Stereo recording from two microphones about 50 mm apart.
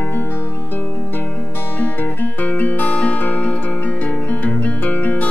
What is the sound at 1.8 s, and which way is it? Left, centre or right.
Music, left.